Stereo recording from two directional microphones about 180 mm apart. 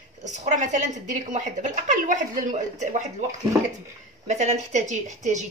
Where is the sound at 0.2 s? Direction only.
40° right (ahead or behind).